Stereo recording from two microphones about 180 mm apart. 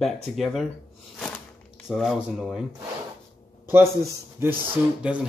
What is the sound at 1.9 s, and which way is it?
Speech, centre (ahead or behind).